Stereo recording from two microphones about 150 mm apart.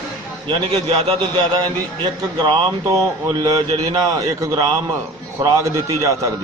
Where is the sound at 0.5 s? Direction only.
40° right (ahead or behind); by 6.4 s 25° right (ahead or behind).